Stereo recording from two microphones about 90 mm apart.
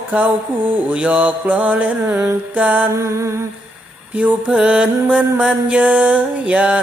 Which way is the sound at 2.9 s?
35° right (ahead or behind).